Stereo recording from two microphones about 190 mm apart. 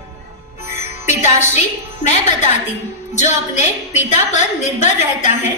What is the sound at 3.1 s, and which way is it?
A woman's voice, 40° left (ahead or behind).